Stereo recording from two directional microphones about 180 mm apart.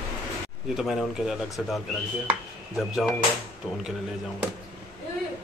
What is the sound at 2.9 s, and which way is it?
Speech, centre (ahead or behind).